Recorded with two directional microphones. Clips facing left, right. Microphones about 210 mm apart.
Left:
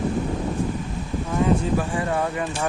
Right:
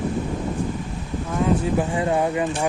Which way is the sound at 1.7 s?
20° right (ahead or behind).